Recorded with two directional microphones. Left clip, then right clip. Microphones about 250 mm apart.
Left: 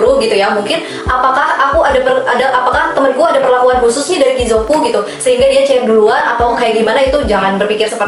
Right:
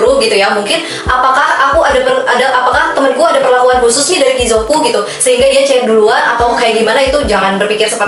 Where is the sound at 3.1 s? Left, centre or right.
Left.